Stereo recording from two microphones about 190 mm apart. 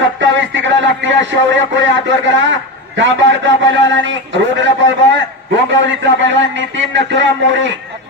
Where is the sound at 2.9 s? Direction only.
75° right (ahead or behind).